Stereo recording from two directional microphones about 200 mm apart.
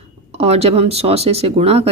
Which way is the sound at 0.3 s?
30° right (ahead or behind).